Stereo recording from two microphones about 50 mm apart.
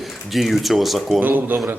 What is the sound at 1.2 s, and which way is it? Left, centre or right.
Speech, right.